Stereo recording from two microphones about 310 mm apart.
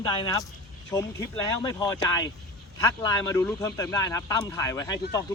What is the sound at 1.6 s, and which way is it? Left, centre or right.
Speech, centre.